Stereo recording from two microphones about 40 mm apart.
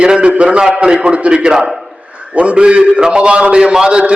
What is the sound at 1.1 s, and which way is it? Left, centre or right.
A man's voice, right.